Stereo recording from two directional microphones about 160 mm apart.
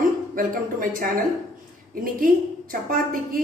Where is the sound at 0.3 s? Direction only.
60° right (ahead or behind).